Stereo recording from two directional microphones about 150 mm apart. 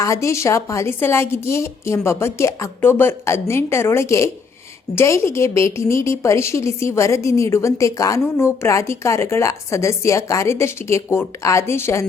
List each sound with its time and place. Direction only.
0.0 s a woman's voice: 20° left (ahead or behind)